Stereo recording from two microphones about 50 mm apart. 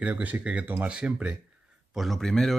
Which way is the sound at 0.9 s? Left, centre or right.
Right.